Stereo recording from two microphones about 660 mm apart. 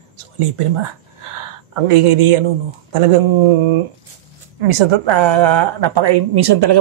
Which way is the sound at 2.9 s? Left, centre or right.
Right.